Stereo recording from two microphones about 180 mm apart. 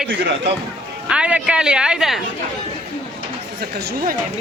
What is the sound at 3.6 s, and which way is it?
Speech, 60° right (ahead or behind).